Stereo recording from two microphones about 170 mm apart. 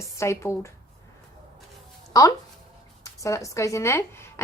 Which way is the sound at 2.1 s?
20° left (ahead or behind).